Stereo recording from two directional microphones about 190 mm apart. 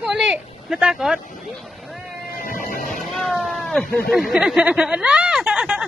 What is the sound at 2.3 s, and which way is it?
Music, 45° left (ahead or behind).